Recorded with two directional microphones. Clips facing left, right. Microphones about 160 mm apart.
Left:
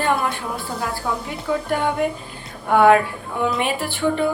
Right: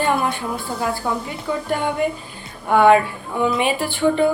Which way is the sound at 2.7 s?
Centre (ahead or behind).